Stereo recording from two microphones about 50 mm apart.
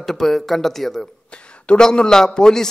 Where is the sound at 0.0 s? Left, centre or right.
Centre.